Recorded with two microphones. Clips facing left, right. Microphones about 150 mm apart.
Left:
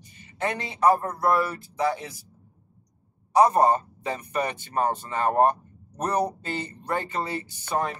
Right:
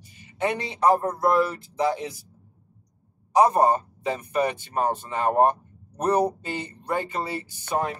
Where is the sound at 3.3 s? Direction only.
15° right (ahead or behind).